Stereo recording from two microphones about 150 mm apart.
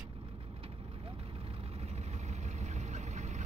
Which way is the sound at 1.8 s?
45° right (ahead or behind).